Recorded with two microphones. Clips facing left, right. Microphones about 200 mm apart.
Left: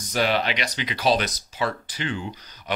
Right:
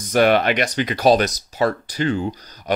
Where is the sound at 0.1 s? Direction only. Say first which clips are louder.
Right 8 dB; 55° right (ahead or behind).